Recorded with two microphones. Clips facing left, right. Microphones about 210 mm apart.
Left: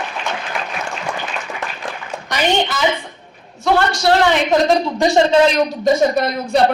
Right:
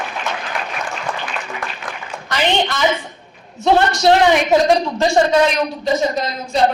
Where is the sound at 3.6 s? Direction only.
20° right (ahead or behind).